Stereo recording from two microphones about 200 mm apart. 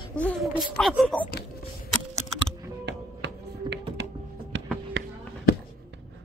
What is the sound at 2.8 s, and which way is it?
Music, 60° right (ahead or behind).